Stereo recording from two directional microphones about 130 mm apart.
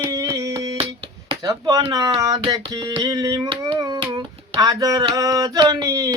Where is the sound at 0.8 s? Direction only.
40° right (ahead or behind).